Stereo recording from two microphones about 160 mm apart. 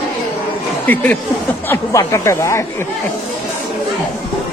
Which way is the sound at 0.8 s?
10° left (ahead or behind).